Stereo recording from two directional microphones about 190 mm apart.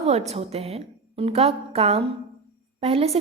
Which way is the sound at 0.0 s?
35° right (ahead or behind).